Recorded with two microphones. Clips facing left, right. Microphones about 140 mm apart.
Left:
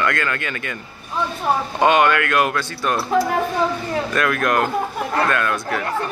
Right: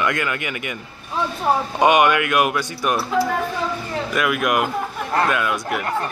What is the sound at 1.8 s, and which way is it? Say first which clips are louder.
A man's voice: even; 15° right (ahead or behind).